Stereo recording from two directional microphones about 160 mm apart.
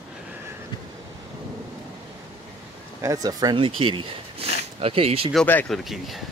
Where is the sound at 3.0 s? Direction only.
20° right (ahead or behind); by 5.2 s 35° right (ahead or behind).